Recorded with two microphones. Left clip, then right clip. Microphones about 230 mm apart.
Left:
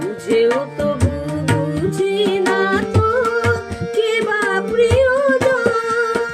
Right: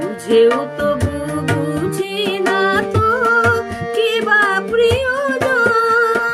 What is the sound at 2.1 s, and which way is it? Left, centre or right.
Music, right.